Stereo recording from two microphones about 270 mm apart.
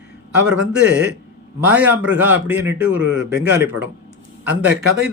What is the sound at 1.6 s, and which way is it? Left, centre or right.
Speech, centre.